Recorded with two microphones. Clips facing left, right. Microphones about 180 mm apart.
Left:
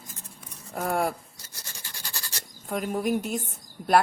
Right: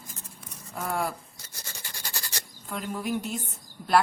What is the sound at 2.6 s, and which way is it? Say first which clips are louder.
Speech: left 5 dB; 50° left (ahead or behind).